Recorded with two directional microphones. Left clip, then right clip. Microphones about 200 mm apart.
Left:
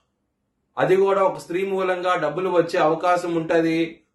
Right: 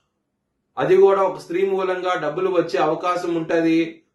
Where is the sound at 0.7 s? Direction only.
15° left (ahead or behind).